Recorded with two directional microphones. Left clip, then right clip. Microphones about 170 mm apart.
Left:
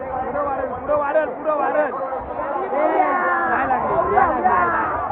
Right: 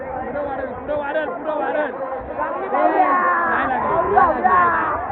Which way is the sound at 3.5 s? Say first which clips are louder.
Even; 30° right (ahead or behind).